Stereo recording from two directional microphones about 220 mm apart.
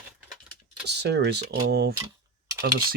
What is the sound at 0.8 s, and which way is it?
Speech, 50° right (ahead or behind).